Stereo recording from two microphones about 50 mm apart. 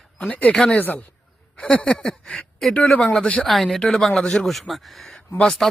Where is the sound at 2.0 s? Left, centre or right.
Centre.